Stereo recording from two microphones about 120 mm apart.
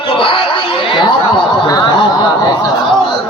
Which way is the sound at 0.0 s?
50° left (ahead or behind).